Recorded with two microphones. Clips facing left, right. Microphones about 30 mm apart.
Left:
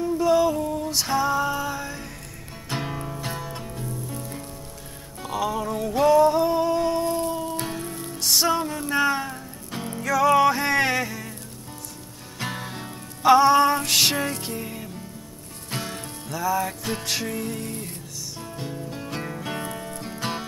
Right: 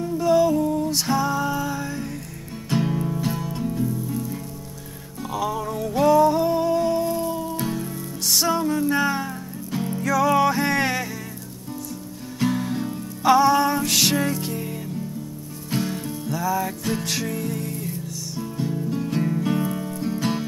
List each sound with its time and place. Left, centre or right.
0.0 s music: centre
12.4 s music: centre